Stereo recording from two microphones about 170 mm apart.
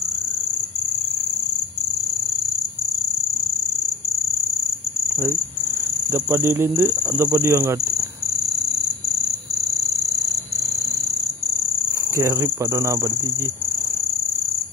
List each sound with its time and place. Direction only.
6.3 s speech: 15° right (ahead or behind)
12.2 s speech: 15° right (ahead or behind)